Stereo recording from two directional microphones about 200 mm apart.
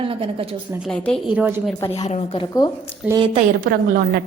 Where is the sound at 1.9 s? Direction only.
25° left (ahead or behind).